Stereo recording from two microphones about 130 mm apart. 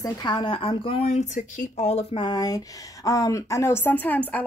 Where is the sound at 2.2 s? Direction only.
30° left (ahead or behind).